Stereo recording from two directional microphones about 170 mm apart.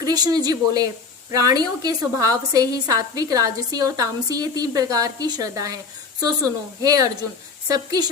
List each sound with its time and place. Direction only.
0.0 s a woman's voice: 20° right (ahead or behind)